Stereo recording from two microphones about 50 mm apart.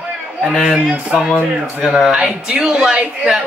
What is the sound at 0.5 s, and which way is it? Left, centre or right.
Speech, centre.